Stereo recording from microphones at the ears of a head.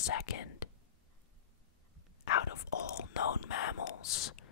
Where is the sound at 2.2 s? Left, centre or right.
Left.